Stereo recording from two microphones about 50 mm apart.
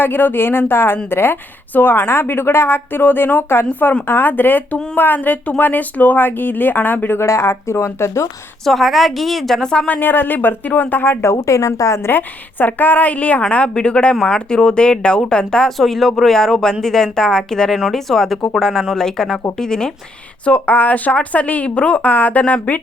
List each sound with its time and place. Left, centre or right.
0.0 s a woman's voice: left
7.2 s speech: left
8.6 s a woman's voice: centre
9.6 s speech: centre
10.0 s speech: left
11.2 s a woman's voice: left
12.0 s speech: left; by 15.7 s centre
15.8 s a woman's voice: centre
20.4 s speech: left